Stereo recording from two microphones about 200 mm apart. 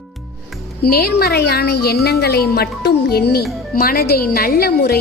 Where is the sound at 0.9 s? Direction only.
50° left (ahead or behind).